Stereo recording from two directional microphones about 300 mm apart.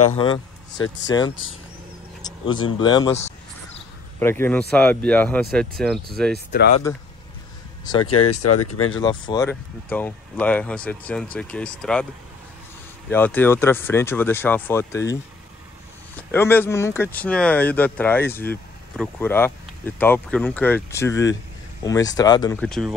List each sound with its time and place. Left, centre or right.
0.1 s speech: centre
4.2 s speech: centre
8.0 s speech: left
8.9 s speech: centre
13.1 s speech: centre
16.2 s speech: centre